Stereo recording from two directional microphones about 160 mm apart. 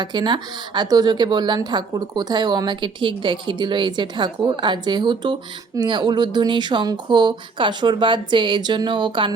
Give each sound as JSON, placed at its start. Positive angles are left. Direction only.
{"t": 0.0, "sound": "a woman's voice", "side_deg": -25}